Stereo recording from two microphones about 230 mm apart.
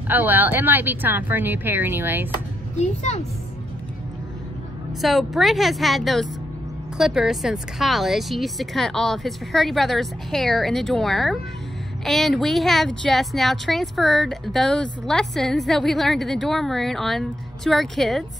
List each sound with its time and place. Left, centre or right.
0.1 s speech: centre
2.8 s a woman's voice: left
5.0 s speech: centre